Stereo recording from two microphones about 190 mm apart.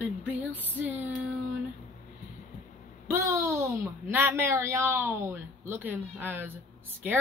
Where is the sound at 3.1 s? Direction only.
15° right (ahead or behind).